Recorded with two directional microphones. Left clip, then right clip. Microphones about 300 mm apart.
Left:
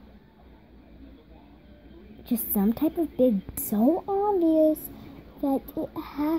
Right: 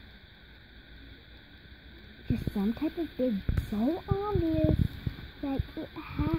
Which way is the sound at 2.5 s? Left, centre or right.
Left.